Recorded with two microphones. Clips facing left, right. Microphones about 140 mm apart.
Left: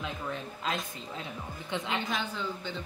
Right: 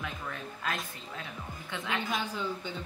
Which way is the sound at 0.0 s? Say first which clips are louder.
Left 3 dB; 25° left (ahead or behind).